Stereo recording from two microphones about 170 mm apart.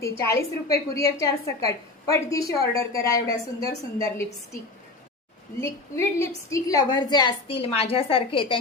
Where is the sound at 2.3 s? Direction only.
20° left (ahead or behind).